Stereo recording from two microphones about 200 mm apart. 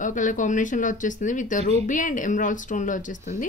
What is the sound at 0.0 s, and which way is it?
Speech, 40° left (ahead or behind).